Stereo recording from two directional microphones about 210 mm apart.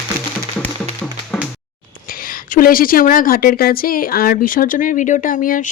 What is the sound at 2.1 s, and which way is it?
A woman's voice, 45° left (ahead or behind).